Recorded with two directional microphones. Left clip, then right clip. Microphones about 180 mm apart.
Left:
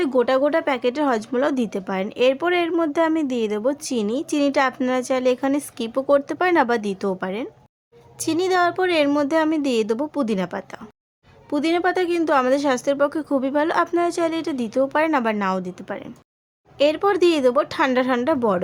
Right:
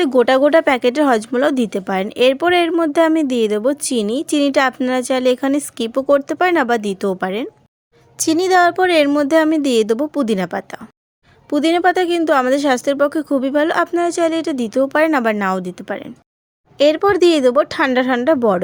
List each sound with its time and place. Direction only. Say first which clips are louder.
0.0 s speech: right 6 dB; 35° right (ahead or behind)